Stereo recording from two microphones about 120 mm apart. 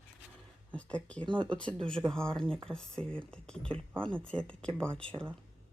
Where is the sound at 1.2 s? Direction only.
40° right (ahead or behind).